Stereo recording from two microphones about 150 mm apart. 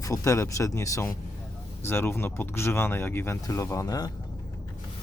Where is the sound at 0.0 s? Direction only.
20° left (ahead or behind).